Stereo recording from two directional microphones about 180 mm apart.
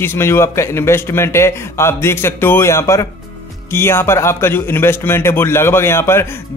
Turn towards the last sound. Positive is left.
turn(degrees=15)  # may be behind; listen again after turning